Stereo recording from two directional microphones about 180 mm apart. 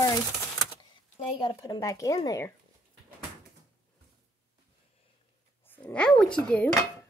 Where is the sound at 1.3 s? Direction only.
25° left (ahead or behind).